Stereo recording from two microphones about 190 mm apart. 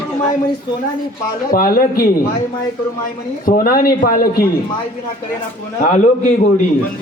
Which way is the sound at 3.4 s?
50° left (ahead or behind).